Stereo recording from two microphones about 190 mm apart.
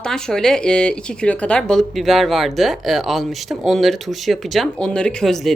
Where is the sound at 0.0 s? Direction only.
5° left (ahead or behind).